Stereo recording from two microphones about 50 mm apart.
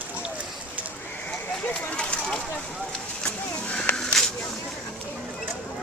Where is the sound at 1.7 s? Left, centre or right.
Left.